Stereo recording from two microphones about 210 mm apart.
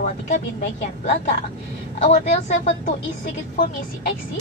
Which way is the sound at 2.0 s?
30° left (ahead or behind).